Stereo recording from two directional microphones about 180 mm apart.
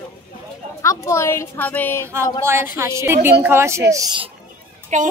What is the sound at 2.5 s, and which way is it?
Speech, 15° right (ahead or behind).